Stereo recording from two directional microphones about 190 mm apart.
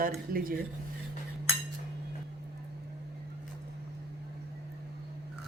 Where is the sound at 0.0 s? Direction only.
50° right (ahead or behind).